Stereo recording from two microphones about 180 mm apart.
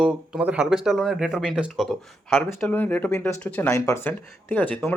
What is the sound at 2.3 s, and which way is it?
A man's voice, 10° left (ahead or behind).